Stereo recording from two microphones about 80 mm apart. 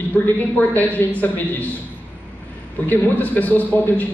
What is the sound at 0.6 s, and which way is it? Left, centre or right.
Speech, left.